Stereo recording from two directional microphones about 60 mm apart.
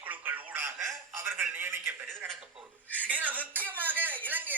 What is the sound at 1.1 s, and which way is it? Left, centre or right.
Speech, right.